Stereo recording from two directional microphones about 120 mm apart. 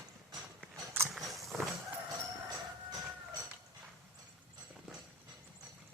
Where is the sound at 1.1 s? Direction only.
Centre (ahead or behind).